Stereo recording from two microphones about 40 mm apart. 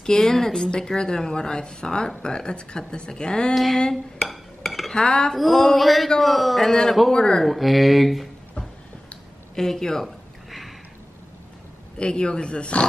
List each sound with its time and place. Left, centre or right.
0.0 s speech: centre
3.5 s a man's voice: centre
3.9 s dishes: centre
4.9 s speech: left
5.3 s a man's voice: centre
7.4 s a man's voice: centre
9.6 s speech: centre
10.0 s a sound: centre
12.0 s speech: left